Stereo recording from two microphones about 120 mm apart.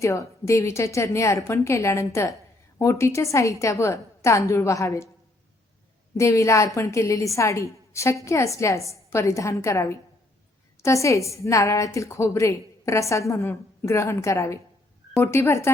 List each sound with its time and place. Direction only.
0.0 s a woman's voice: 25° left (ahead or behind)
6.1 s a woman's voice: 25° left (ahead or behind)